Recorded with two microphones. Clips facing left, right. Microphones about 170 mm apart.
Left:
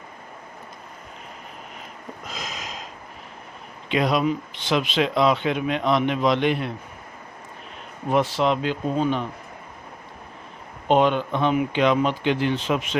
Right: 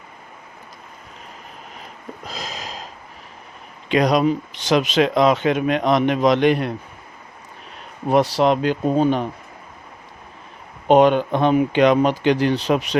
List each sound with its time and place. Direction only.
2.2 s a sound: 35° right (ahead or behind)
3.8 s speech: 40° right (ahead or behind)
8.1 s speech: 40° right (ahead or behind)
10.8 s speech: 50° right (ahead or behind)
12.3 s speech: 40° right (ahead or behind)